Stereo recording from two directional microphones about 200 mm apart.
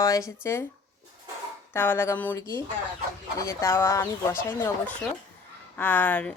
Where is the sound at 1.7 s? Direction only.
10° left (ahead or behind).